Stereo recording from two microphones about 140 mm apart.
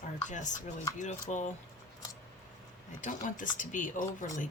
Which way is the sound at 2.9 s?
65° left (ahead or behind).